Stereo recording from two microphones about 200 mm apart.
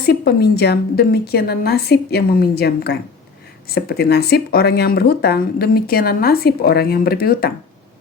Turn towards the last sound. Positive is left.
turn(degrees=50)  # may be behind; listen again after turning